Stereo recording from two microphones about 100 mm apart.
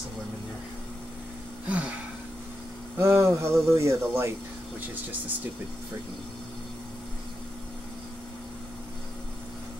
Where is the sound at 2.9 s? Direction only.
30° right (ahead or behind).